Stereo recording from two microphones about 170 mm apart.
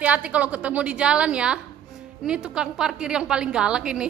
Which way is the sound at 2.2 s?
5° right (ahead or behind).